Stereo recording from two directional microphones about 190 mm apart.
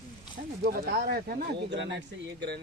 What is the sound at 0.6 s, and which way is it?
Speech, 50° right (ahead or behind).